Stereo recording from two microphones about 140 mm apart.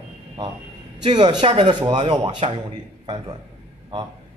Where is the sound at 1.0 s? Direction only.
35° right (ahead or behind).